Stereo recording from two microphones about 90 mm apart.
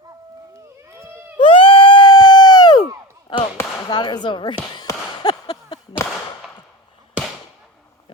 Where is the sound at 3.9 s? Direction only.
55° left (ahead or behind).